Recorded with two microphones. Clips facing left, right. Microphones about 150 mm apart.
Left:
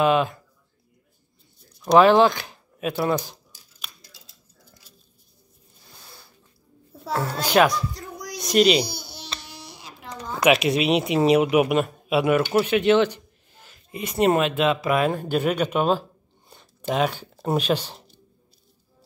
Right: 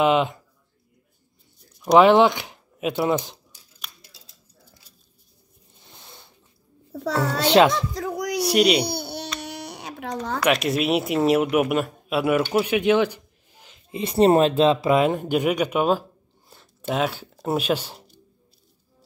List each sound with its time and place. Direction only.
0.0 s a child's voice: 20° right (ahead or behind)
1.8 s speech: 15° right (ahead or behind)
5.8 s zipper: 25° right (ahead or behind)
6.9 s music: 75° right (ahead or behind)
7.2 s a child's voice: 25° right (ahead or behind)
8.0 s a sound: 80° right
8.4 s speech: 10° right (ahead or behind)
8.8 s babbling: 60° right (ahead or behind)
9.4 s baby cry: 65° right (ahead or behind)
10.4 s speech: centre (ahead or behind)
12.5 s a sound: 10° right (ahead or behind)
13.9 s speech: 30° right (ahead or behind); by 18.1 s 10° right (ahead or behind)